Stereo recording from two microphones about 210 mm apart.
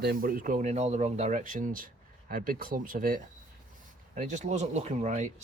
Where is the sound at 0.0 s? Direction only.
45° right (ahead or behind).